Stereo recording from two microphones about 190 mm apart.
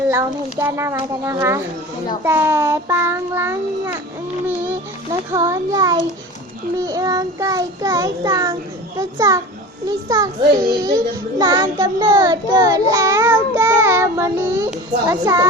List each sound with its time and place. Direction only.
0.1 s child singing: 15° right (ahead or behind)
5.3 s a child's voice: 20° right (ahead or behind)
9.0 s child singing: 15° right (ahead or behind)
9.8 s a child's voice: 20° right (ahead or behind)
15.1 s child singing: 15° right (ahead or behind)